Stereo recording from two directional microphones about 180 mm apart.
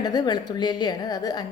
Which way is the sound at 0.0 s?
20° left (ahead or behind).